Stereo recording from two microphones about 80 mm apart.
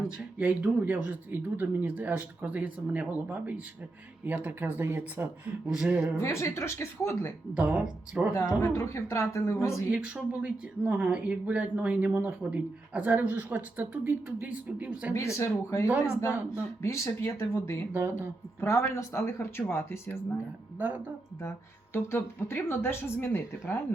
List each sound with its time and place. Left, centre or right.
0.3 s speech: centre
6.1 s speech: left
7.5 s speech: centre
8.3 s speech: left
9.9 s speech: centre
15.1 s speech: left
17.9 s speech: right
18.6 s speech: left
20.7 s speech: right
21.9 s speech: left